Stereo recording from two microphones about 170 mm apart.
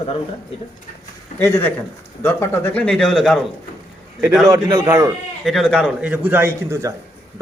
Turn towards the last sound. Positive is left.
turn(degrees=-15)  # may be behind; listen again after turning